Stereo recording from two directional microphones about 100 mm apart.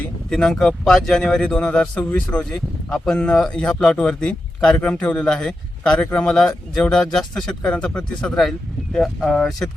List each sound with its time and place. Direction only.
0.3 s speech: 5° left (ahead or behind)